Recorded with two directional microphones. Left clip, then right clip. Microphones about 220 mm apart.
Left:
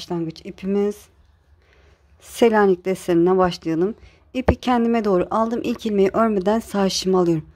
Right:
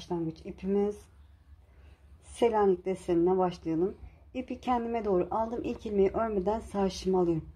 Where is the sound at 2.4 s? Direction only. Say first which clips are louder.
Left 10 dB; 35° left (ahead or behind).